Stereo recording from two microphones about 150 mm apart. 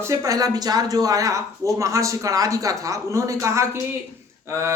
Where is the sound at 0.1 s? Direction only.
20° right (ahead or behind).